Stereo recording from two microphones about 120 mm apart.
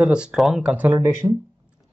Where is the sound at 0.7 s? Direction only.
15° right (ahead or behind).